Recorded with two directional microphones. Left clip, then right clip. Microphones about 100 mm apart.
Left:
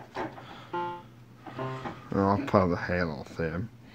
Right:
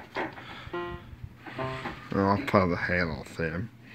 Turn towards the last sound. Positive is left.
turn(degrees=15)  # may be behind; listen again after turning